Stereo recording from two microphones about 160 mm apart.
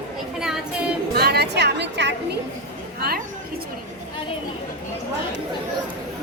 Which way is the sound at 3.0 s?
70° right (ahead or behind).